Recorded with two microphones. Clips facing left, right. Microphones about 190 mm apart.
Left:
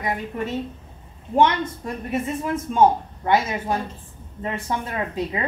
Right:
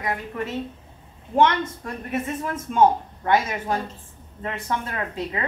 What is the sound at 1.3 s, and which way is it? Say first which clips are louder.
A woman's voice: left 1 dB; 15° left (ahead or behind).